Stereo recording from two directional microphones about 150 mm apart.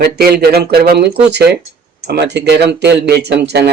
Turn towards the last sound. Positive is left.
turn(degrees=-90)